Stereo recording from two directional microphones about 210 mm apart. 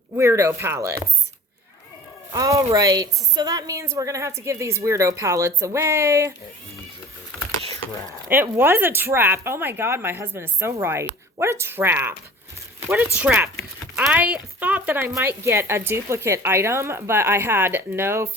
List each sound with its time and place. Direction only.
0.2 s speech: 15° right (ahead or behind)
2.3 s speech: 15° right (ahead or behind)
8.3 s speech: 10° right (ahead or behind)
13.2 s speech: 10° right (ahead or behind)